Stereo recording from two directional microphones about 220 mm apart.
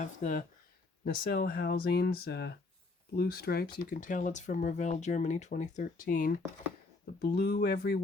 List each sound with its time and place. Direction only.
0.0 s speech: 35° left (ahead or behind)
1.0 s speech: 45° left (ahead or behind)